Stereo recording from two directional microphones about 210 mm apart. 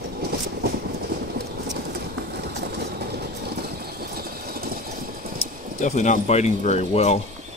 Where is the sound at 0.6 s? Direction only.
50° right (ahead or behind).